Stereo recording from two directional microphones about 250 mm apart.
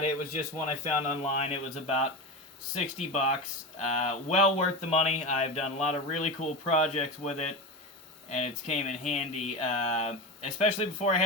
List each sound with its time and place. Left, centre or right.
0.7 s speech: left